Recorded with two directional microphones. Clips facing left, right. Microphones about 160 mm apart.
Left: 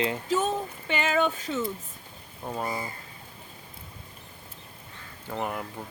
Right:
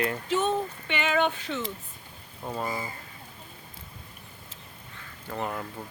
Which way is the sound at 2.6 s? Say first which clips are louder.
Even; 20° left (ahead or behind).